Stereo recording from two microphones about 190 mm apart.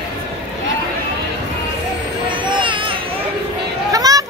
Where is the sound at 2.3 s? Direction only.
25° right (ahead or behind).